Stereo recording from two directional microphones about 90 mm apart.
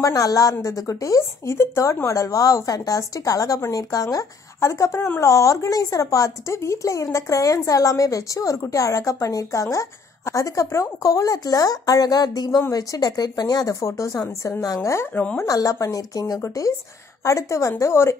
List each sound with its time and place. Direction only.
0.0 s a woman's voice: 40° left (ahead or behind)